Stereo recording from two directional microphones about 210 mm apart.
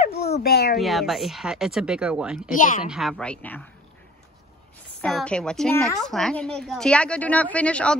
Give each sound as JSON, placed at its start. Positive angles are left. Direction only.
{"t": 0.4, "sound": "a child's voice", "side_deg": 50}
{"t": 0.7, "sound": "a woman's voice", "side_deg": 0}
{"t": 2.5, "sound": "speech", "side_deg": 40}
{"t": 2.9, "sound": "a woman's voice", "side_deg": 0}
{"t": 5.0, "sound": "a woman's voice", "side_deg": 5}